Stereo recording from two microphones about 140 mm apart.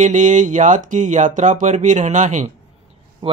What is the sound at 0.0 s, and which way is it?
Speech, 60° right (ahead or behind).